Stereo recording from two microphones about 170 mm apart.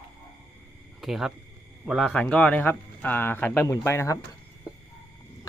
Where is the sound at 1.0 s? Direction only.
Centre (ahead or behind); by 4.1 s 15° left (ahead or behind).